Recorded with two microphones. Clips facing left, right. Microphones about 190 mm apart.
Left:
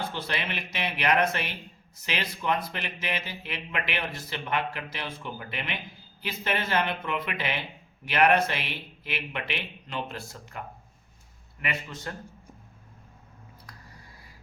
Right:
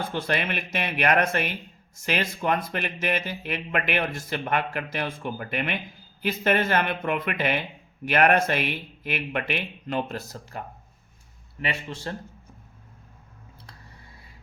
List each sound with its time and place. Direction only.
0.1 s speech: 50° right (ahead or behind)
11.6 s a man's voice: 30° right (ahead or behind)